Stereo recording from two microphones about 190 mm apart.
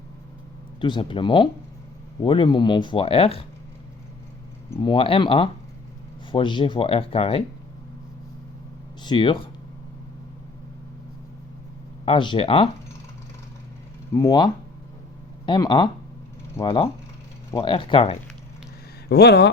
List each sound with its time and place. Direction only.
0.8 s speech: 25° left (ahead or behind)
4.8 s speech: 25° left (ahead or behind)
9.0 s speech: 25° left (ahead or behind)
12.0 s speech: 25° left (ahead or behind)
14.1 s speech: 20° left (ahead or behind)
19.0 s speech: 60° left (ahead or behind)